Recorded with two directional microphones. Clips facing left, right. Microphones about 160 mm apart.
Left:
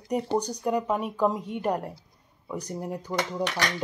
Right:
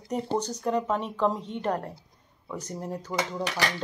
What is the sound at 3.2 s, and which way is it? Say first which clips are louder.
Dishes: left 1 dB; 5° right (ahead or behind).